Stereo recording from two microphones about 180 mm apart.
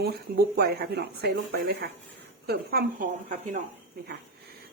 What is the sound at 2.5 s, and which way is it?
A woman's voice, 55° right (ahead or behind).